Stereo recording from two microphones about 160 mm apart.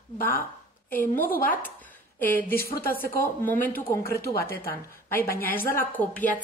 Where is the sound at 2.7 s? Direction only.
65° left (ahead or behind).